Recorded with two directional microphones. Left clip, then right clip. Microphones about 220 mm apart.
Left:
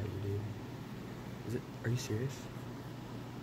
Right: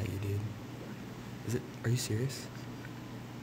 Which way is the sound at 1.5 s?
40° right (ahead or behind).